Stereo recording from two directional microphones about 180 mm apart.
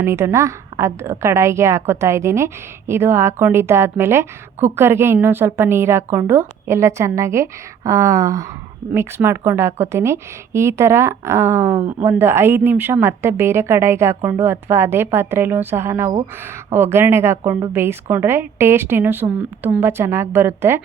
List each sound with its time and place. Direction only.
0.0 s a woman's voice: 15° right (ahead or behind)